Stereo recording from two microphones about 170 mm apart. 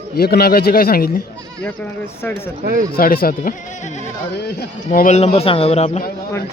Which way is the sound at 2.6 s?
55° right (ahead or behind).